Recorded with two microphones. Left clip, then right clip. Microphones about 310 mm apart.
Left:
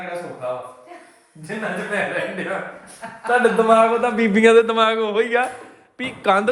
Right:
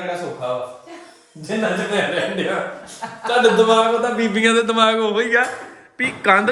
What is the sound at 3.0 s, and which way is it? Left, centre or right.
Speech, right.